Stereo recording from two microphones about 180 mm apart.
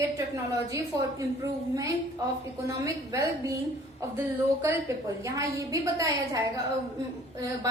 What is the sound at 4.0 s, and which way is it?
A woman's voice, 15° right (ahead or behind).